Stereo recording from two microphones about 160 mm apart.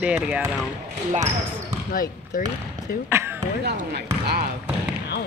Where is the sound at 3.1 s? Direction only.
15° right (ahead or behind).